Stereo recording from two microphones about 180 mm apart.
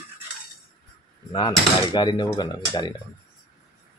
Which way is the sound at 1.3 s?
25° left (ahead or behind).